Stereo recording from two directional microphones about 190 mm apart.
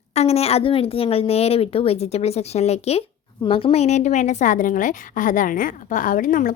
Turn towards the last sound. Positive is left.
turn(degrees=45)  # may be behind; listen again after turning